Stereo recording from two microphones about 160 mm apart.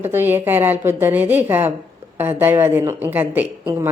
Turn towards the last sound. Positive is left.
turn(degrees=-15)  # may be behind; listen again after turning